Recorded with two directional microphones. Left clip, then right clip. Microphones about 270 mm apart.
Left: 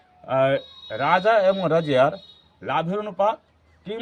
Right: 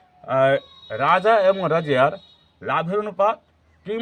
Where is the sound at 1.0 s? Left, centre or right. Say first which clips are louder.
Right 2 dB; right.